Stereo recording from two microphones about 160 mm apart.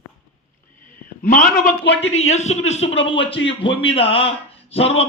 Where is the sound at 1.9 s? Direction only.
40° left (ahead or behind).